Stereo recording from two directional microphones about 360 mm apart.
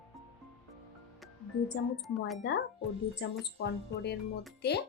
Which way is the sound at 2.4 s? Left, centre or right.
Left.